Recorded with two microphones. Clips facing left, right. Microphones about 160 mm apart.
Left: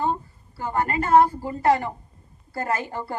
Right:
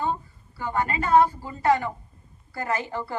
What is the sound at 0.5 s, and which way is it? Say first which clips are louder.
A woman's voice: left 2 dB; 45° left (ahead or behind).